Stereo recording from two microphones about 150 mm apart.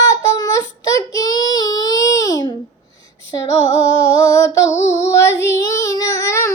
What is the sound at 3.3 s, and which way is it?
Female singing, 20° left (ahead or behind).